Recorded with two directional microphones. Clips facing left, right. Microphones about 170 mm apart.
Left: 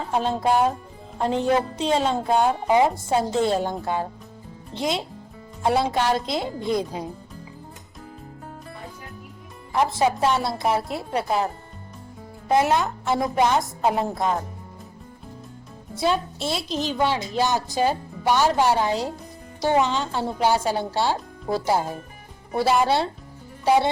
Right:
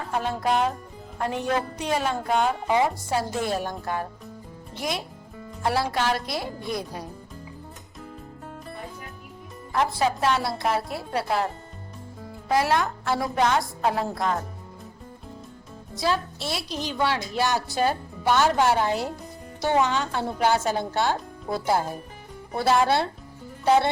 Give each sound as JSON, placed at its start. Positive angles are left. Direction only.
{"t": 0.0, "sound": "a woman's voice", "side_deg": 20}
{"t": 9.7, "sound": "a woman's voice", "side_deg": 20}
{"t": 12.5, "sound": "a woman's voice", "side_deg": 20}
{"t": 16.0, "sound": "a woman's voice", "side_deg": 20}